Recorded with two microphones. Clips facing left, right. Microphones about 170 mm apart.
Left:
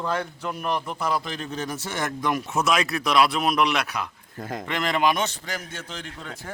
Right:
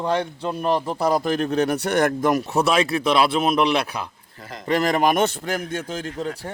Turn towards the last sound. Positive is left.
turn(degrees=-35)  # may be behind; listen again after turning